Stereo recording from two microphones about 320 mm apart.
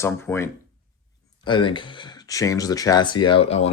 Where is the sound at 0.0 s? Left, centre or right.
Centre.